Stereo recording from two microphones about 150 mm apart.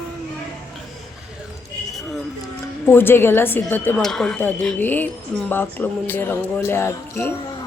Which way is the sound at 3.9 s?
5° left (ahead or behind).